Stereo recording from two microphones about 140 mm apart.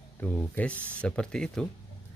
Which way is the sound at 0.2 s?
10° left (ahead or behind).